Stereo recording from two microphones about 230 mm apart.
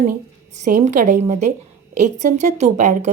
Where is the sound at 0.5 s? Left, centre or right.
Right.